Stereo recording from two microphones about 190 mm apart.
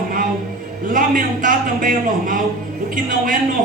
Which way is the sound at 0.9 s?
45° right (ahead or behind).